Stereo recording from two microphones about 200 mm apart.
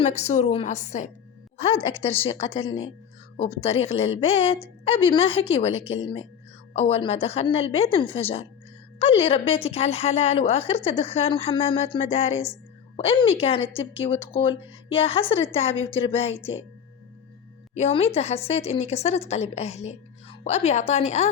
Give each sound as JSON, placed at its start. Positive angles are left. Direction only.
{"t": 0.0, "sound": "a woman's voice", "side_deg": 35}
{"t": 17.7, "sound": "speech", "side_deg": 30}